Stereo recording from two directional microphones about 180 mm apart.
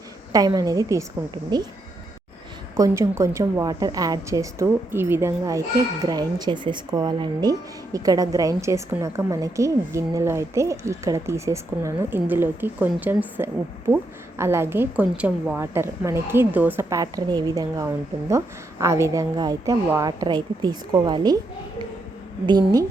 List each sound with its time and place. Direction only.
0.3 s a woman's voice: 20° right (ahead or behind)
2.7 s a woman's voice: 20° right (ahead or behind)
22.4 s a woman's voice: 20° right (ahead or behind)